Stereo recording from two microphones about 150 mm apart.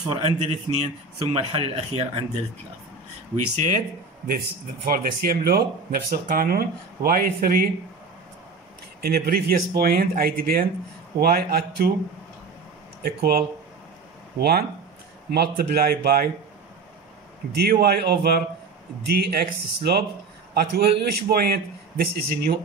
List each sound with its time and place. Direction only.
0.1 s a man's voice: 45° right (ahead or behind)
3.5 s a man's voice: 55° right (ahead or behind)
4.8 s speech: 80° right
9.0 s a man's voice: 90° right
13.0 s a man's voice: 90° right
15.3 s a man's voice: 90° right
17.6 s a man's voice: 90° right